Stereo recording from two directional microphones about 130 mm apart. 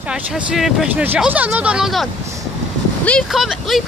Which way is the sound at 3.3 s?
Centre (ahead or behind).